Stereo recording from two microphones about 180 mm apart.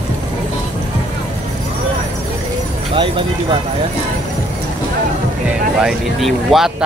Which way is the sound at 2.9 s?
30° right (ahead or behind).